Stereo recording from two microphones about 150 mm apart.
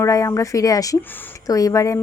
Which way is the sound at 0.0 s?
20° left (ahead or behind).